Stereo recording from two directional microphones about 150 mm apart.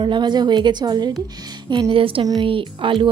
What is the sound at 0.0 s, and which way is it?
Speech, 30° right (ahead or behind).